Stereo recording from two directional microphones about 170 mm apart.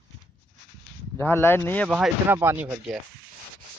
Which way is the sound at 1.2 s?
15° left (ahead or behind).